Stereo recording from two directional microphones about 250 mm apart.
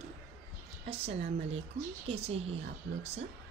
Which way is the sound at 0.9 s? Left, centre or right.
Right.